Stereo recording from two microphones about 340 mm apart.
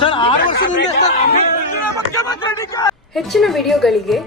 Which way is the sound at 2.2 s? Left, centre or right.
Centre.